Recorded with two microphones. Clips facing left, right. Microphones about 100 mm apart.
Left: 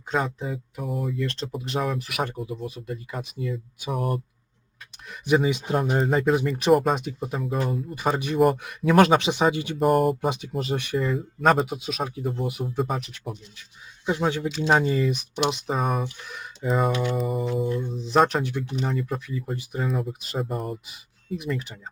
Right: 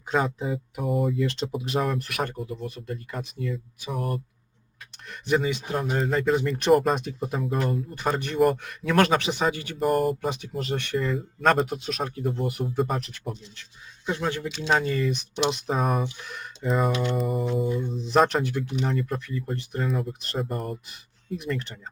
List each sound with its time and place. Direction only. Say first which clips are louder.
0.1 s speech: right 1 dB; 5° right (ahead or behind)
5.2 s speech: left 3 dB; 10° left (ahead or behind)
9.8 s speech: left 3 dB; centre (ahead or behind)
10.2 s speech: left 3 dB; 20° left (ahead or behind); by 13.7 s centre (ahead or behind)
14.0 s speech: left 3 dB; 15° left (ahead or behind)
14.4 s speech: left 3 dB; 5° left (ahead or behind)